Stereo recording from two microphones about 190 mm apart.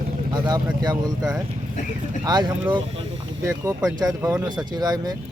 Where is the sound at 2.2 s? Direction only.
20° right (ahead or behind).